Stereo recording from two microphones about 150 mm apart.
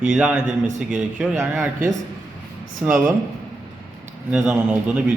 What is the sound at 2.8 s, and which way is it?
Speech, 5° right (ahead or behind).